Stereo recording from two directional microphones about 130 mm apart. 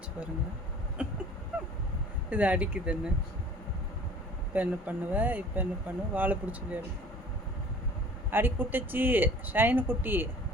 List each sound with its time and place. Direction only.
1.0 s speech: 10° right (ahead or behind)
2.3 s speech: 10° right (ahead or behind)
4.5 s speech: 15° right (ahead or behind)
8.3 s speech: 15° right (ahead or behind)